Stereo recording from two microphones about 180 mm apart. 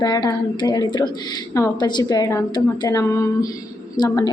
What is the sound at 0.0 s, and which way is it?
A woman's voice, 20° left (ahead or behind).